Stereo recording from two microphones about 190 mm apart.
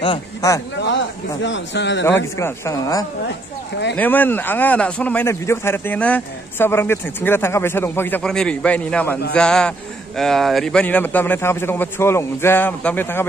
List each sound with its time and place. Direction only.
0.0 s speech: 20° left (ahead or behind)
1.4 s a man's voice: 70° left (ahead or behind)
2.3 s a man's voice: 15° left (ahead or behind)